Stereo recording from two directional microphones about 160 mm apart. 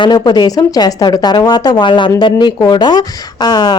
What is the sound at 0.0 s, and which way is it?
Speech, 25° left (ahead or behind).